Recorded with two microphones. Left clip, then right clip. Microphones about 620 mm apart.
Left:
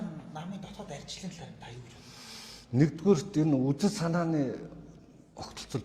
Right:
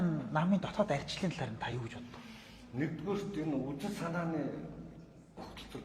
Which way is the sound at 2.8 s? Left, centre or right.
Left.